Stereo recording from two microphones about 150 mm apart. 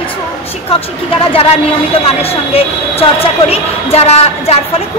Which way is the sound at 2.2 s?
40° left (ahead or behind).